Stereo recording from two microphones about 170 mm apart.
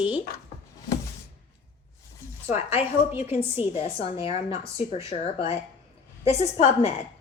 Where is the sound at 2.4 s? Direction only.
40° left (ahead or behind).